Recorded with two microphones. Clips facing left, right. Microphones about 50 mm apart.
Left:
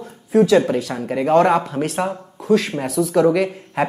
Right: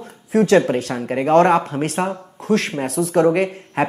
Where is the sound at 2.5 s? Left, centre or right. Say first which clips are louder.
Left 2 dB; right.